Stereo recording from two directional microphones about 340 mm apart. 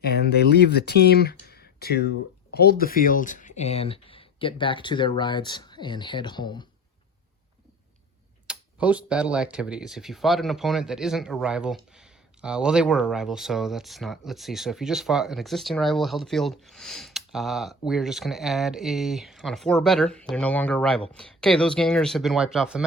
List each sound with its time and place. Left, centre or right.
0.0 s speech: left; by 6.7 s centre
8.4 s speech: centre